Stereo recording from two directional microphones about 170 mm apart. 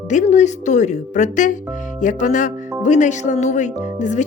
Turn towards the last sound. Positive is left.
turn(degrees=45)  # may be behind; listen again after turning